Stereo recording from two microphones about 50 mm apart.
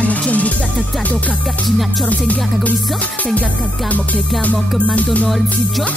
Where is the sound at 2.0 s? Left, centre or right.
Left.